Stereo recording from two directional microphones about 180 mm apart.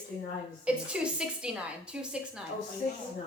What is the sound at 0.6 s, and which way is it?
A woman's voice, 5° right (ahead or behind).